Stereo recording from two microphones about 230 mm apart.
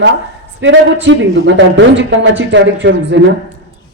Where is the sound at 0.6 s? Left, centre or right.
Right.